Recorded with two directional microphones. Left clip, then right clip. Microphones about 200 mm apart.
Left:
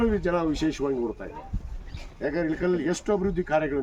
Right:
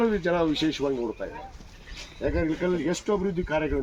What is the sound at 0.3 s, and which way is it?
Speech, 15° left (ahead or behind).